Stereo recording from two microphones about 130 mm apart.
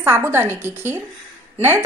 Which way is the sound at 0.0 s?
20° right (ahead or behind).